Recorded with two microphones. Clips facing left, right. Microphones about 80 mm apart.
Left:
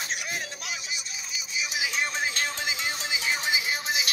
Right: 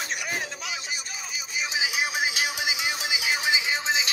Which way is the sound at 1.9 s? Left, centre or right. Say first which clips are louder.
Right 1 dB; centre.